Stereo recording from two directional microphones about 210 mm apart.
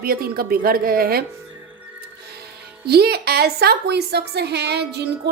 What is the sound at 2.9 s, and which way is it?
A woman's voice, 50° right (ahead or behind).